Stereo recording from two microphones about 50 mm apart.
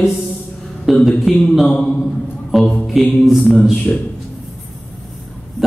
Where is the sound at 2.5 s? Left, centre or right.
Centre.